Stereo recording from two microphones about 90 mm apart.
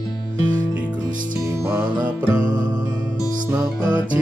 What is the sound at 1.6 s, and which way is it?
Music, 15° right (ahead or behind).